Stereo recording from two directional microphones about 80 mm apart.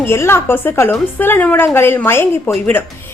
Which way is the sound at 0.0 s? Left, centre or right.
Left.